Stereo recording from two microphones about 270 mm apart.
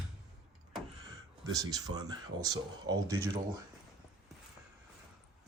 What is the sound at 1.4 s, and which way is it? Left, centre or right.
Speech, centre.